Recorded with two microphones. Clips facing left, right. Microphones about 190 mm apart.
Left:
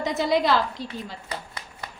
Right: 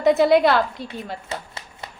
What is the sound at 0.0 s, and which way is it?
Speech, 60° right (ahead or behind).